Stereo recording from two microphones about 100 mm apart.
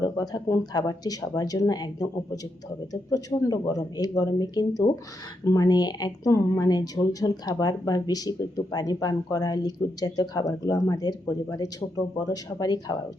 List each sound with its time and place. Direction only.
0.0 s speech: 40° left (ahead or behind)